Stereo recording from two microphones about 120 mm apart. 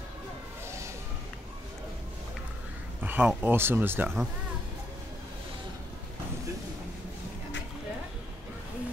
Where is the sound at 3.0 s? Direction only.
15° right (ahead or behind).